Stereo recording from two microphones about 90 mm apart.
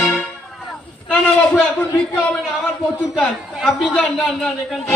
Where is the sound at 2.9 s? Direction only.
20° left (ahead or behind).